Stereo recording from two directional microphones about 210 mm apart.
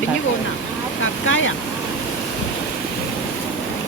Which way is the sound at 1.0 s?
65° left (ahead or behind).